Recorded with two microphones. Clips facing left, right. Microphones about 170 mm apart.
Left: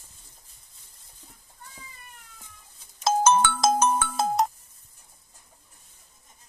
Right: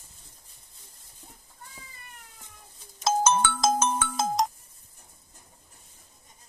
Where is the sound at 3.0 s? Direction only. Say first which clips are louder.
Left 3 dB; 60° left (ahead or behind).